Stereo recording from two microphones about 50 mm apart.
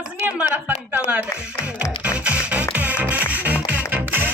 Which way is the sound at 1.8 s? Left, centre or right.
Right.